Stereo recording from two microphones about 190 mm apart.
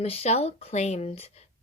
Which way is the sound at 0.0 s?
35° left (ahead or behind).